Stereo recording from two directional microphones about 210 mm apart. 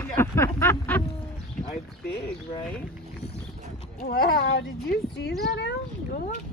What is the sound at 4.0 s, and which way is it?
Speech, 45° left (ahead or behind).